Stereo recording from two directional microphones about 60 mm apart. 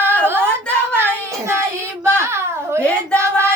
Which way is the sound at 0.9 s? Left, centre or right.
Right.